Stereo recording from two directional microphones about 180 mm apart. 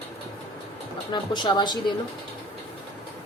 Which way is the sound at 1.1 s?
25° left (ahead or behind).